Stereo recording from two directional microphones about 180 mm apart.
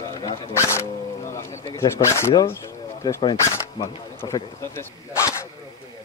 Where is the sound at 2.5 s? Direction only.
15° left (ahead or behind).